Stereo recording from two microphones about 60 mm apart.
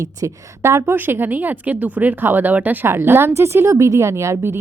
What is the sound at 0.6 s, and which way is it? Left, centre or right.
Speech, right.